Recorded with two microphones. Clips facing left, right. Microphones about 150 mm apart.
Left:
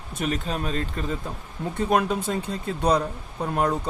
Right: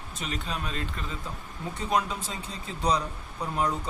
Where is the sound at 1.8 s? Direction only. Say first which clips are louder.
Left 6 dB; 55° left (ahead or behind).